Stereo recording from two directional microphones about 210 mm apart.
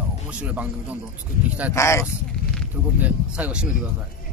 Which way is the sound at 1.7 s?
15° left (ahead or behind).